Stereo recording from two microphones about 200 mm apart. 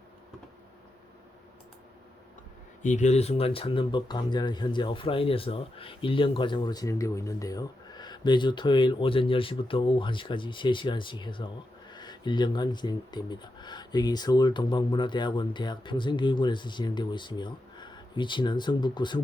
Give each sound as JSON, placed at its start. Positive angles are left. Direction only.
{"t": 2.8, "sound": "speech", "side_deg": 35}